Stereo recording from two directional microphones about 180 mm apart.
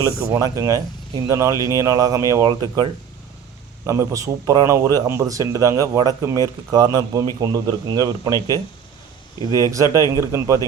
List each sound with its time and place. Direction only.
0.0 s a man's voice: 15° right (ahead or behind)
9.5 s a man's voice: 20° right (ahead or behind)